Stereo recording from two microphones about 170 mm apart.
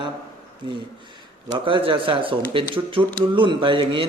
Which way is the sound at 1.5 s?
30° right (ahead or behind).